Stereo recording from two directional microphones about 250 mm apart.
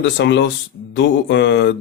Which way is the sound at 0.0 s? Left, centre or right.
Left.